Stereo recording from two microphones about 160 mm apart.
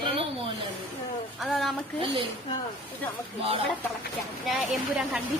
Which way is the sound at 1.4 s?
Centre (ahead or behind).